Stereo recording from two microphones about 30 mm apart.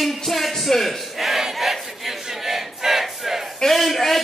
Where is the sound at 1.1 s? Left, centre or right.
Centre.